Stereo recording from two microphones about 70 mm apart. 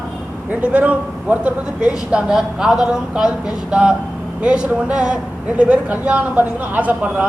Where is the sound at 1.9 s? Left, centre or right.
Centre.